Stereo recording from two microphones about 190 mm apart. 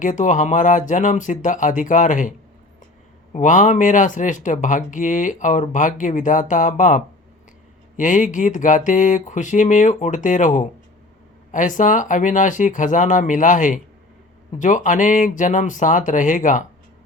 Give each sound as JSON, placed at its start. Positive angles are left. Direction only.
{"t": 0.0, "sound": "speech", "side_deg": 40}
{"t": 3.3, "sound": "speech", "side_deg": 40}